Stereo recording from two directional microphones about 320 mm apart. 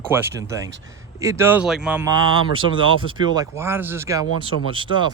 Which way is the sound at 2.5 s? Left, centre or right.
Centre.